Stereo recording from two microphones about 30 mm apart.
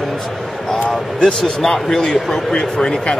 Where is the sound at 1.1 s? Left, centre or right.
Left.